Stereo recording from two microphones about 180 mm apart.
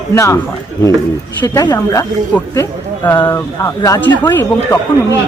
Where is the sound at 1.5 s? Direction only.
20° left (ahead or behind).